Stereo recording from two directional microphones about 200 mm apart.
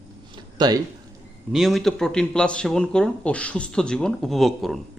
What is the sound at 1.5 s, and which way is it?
Speech, centre (ahead or behind).